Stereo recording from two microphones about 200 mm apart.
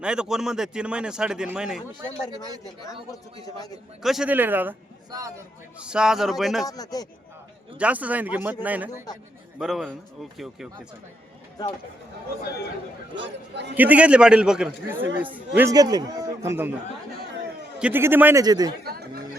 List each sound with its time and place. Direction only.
0.0 s a man's voice: 5° right (ahead or behind)
4.0 s a man's voice: centre (ahead or behind)
6.7 s speech: 20° left (ahead or behind)
7.8 s a man's voice: 5° right (ahead or behind)
13.1 s a man's voice: 60° right (ahead or behind)
13.7 s a man's voice: 10° right (ahead or behind)
15.7 s a man's voice: 20° right (ahead or behind)
17.7 s a man's voice: 10° right (ahead or behind)
18.9 s speech: 50° right (ahead or behind)